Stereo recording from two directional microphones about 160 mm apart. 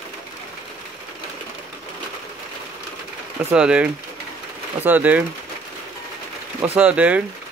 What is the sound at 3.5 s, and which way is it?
Speech, 5° right (ahead or behind).